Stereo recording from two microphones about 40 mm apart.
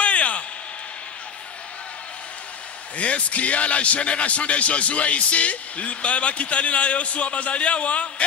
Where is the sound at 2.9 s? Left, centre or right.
Left.